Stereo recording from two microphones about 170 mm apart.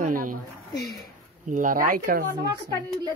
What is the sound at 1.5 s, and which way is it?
Speech, 50° right (ahead or behind).